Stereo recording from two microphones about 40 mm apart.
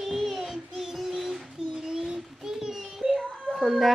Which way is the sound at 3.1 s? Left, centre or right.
Centre.